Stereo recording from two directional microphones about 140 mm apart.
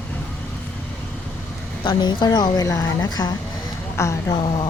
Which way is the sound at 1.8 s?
30° left (ahead or behind).